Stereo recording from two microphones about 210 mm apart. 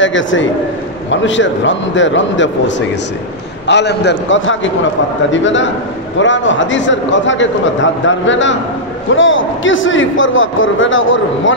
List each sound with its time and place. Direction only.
0.0 s a man's voice: 65° left (ahead or behind)
3.6 s a man's voice: 55° left (ahead or behind)